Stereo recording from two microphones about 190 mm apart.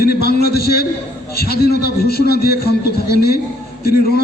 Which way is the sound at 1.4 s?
55° left (ahead or behind).